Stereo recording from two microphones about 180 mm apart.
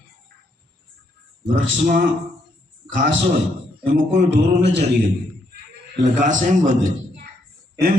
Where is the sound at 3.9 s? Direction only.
80° right.